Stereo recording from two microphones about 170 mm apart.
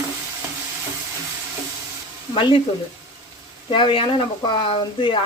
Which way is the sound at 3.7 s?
30° left (ahead or behind).